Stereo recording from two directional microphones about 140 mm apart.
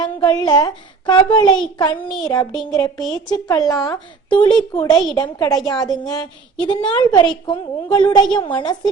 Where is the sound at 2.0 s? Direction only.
5° left (ahead or behind).